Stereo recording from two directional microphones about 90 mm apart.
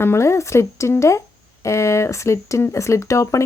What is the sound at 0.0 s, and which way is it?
Speech, 30° left (ahead or behind).